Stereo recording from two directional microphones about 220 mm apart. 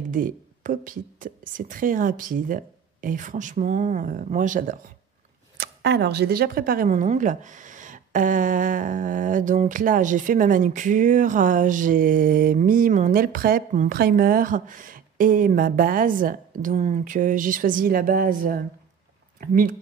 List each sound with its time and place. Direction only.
0.1 s speech: 35° right (ahead or behind)
5.6 s speech: 50° right (ahead or behind)